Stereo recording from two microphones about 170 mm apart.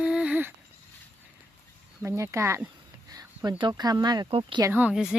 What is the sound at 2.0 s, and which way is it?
Speech, 15° right (ahead or behind).